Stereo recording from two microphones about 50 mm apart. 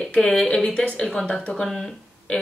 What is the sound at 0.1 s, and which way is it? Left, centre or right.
A woman's voice, centre.